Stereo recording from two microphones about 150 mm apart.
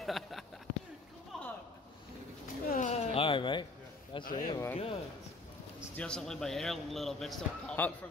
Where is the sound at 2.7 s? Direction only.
45° left (ahead or behind).